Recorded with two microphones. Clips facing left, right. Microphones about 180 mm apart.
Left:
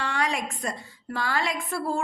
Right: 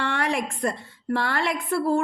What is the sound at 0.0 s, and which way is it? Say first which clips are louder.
A woman's voice: right 3 dB; 55° right (ahead or behind).